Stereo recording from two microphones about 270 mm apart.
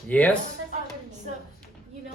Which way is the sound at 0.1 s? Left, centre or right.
Centre.